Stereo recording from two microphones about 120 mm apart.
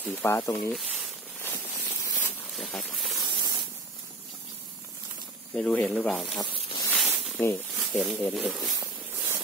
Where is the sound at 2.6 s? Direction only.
5° left (ahead or behind).